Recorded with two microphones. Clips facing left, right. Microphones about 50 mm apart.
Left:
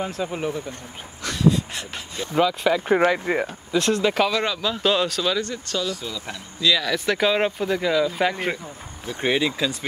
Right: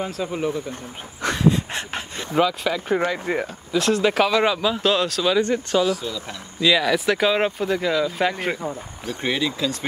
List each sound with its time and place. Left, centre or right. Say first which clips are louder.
0.0 s speech: right 1 dB; centre
1.2 s a sound: right 1 dB; right
2.3 s speech: left 1 dB; centre
4.8 s speech: left 1 dB; centre
5.4 s speech: right 7 dB; right
5.9 s speech: right 5 dB; centre
6.6 s speech: right 3 dB; centre
7.1 s speech: right 1 dB; centre
9.0 s speech: left 2 dB; centre